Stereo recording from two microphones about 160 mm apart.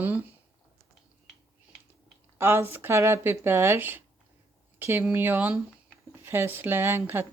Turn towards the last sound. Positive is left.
turn(degrees=-15)  # may be behind; listen again after turning